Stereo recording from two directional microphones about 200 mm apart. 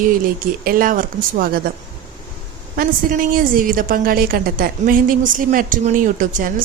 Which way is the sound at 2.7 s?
45° right (ahead or behind).